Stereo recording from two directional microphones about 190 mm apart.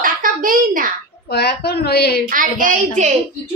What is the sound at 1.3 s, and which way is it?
Speech, 55° left (ahead or behind).